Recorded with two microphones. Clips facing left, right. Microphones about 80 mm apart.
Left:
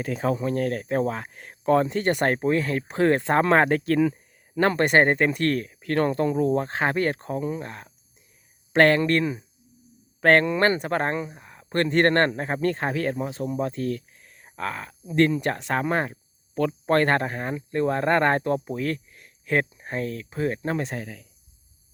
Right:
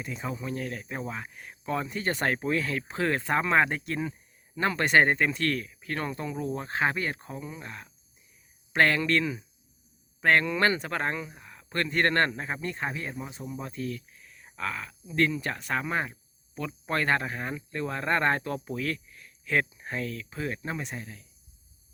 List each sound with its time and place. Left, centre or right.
0.2 s speech: left
2.2 s speech: left
3.7 s speech: left
4.7 s speech: left
10.4 s speech: left
12.9 s speech: left
20.7 s speech: left